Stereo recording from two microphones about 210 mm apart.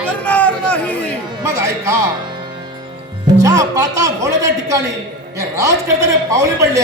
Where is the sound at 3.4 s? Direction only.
15° right (ahead or behind).